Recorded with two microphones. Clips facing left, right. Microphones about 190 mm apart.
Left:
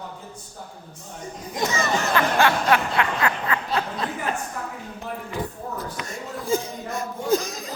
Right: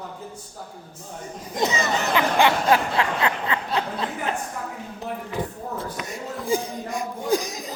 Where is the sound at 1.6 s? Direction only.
20° right (ahead or behind).